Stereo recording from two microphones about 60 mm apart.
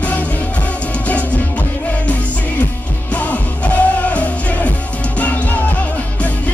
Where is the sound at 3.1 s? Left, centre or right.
Left.